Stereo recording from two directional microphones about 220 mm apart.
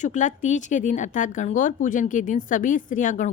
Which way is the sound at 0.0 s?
35° left (ahead or behind).